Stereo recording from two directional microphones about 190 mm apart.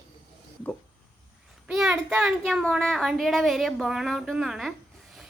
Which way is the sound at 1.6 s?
5° right (ahead or behind).